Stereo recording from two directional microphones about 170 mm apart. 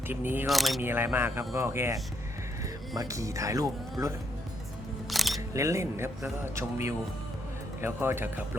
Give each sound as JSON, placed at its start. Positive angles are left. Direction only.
{"t": 0.1, "sound": "speech", "side_deg": -10}
{"t": 0.4, "sound": "speech", "side_deg": 0}
{"t": 0.8, "sound": "speech", "side_deg": -10}
{"t": 3.0, "sound": "speech", "side_deg": -20}
{"t": 5.0, "sound": "music", "side_deg": 0}
{"t": 5.5, "sound": "speech", "side_deg": -20}
{"t": 7.8, "sound": "speech", "side_deg": -15}